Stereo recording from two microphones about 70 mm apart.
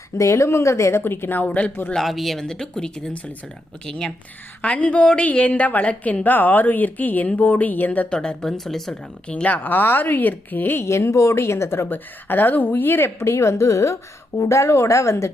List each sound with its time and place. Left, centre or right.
0.2 s a woman's voice: left; by 1.7 s centre
1.9 s a woman's voice: centre; by 8.0 s left
8.1 s speech: centre
9.2 s a woman's voice: centre; by 15.3 s left